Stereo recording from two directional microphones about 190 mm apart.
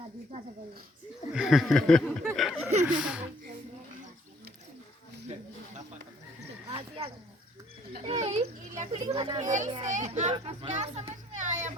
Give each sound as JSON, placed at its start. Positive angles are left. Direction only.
{"t": 1.3, "sound": "speech", "side_deg": -5}
{"t": 2.3, "sound": "chuckle", "side_deg": -5}
{"t": 6.7, "sound": "a sound", "side_deg": -25}
{"t": 8.0, "sound": "a child's voice", "side_deg": -35}
{"t": 9.1, "sound": "a child's voice", "side_deg": -25}
{"t": 9.4, "sound": "a child's voice", "side_deg": -40}